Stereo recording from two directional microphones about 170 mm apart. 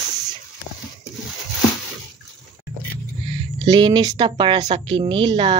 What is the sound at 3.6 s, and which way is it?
Speech, 25° right (ahead or behind).